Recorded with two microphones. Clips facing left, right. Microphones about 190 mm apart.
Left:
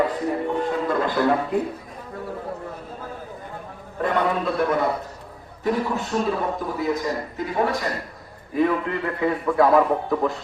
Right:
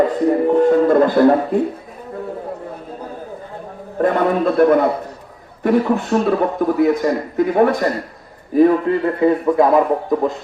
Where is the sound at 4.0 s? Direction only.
50° right (ahead or behind).